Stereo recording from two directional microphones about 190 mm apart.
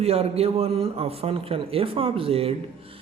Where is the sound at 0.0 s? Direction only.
30° right (ahead or behind).